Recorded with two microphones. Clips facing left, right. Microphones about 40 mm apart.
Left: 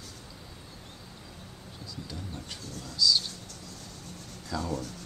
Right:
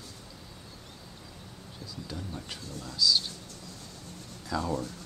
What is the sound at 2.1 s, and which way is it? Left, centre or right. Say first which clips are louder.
Speech: right 4 dB; centre.